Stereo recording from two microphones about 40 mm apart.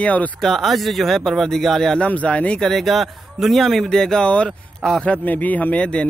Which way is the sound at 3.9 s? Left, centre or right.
Centre.